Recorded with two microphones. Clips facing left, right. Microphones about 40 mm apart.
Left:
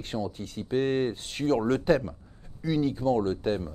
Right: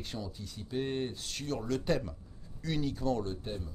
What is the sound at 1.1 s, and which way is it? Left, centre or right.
Speech, left.